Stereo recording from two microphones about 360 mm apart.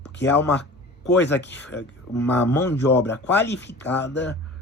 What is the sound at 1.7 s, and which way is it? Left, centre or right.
Speech, left.